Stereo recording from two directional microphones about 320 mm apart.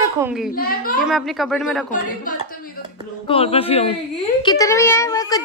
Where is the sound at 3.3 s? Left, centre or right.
Centre.